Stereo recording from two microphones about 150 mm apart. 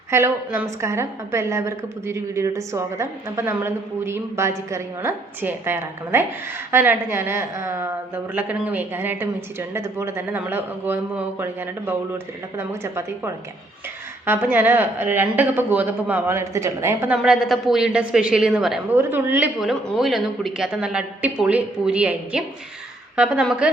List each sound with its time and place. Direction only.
0.1 s a woman's voice: 15° right (ahead or behind)
17.2 s a woman's voice: centre (ahead or behind)